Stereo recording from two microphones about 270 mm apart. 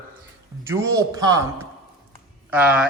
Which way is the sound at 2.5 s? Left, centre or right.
Centre.